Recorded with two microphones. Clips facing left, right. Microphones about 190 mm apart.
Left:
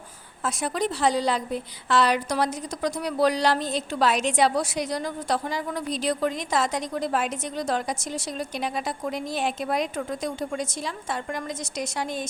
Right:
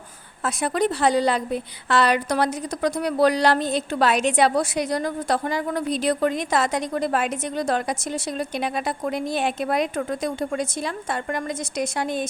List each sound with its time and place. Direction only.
0.4 s a woman's voice: 60° right (ahead or behind)